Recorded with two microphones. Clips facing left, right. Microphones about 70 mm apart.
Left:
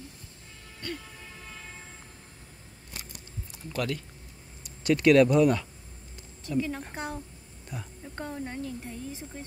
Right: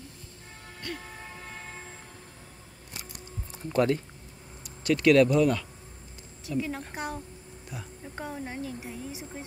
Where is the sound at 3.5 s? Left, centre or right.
Right.